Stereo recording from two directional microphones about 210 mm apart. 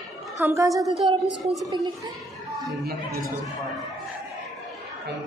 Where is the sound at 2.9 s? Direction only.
45° right (ahead or behind).